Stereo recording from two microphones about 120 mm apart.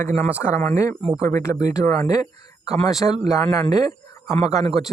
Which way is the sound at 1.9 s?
30° left (ahead or behind).